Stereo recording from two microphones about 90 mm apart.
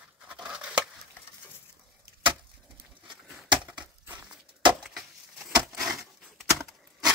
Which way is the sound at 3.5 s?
55° right (ahead or behind).